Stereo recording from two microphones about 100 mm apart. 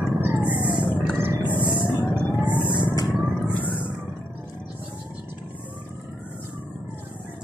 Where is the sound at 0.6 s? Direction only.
55° left (ahead or behind).